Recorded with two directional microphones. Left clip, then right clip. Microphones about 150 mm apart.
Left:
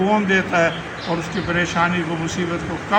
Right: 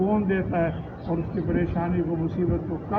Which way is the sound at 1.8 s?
20° left (ahead or behind).